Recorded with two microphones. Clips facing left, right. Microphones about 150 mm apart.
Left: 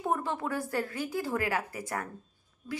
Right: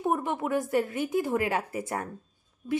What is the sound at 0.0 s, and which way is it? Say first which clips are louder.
Speech: right 3 dB; 15° right (ahead or behind).